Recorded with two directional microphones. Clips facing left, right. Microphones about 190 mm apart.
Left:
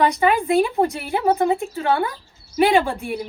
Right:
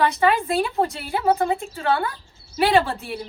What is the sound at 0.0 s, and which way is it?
A woman's voice, 15° left (ahead or behind).